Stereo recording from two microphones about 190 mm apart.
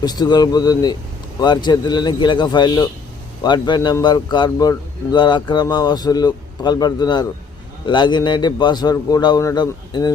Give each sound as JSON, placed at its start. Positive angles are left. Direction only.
{"t": 0.0, "sound": "a man's voice", "side_deg": 20}